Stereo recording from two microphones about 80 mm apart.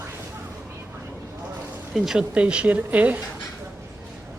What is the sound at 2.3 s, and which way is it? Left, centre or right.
Speech, centre.